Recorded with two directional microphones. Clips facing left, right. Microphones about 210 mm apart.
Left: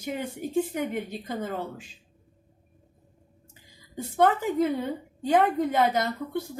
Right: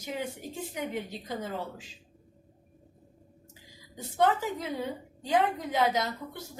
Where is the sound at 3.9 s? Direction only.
55° left (ahead or behind).